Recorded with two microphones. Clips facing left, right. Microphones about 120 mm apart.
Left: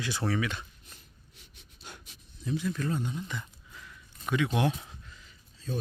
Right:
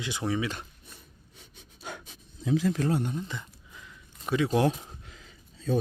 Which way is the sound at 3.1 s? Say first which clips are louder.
Right 2 dB; 25° right (ahead or behind).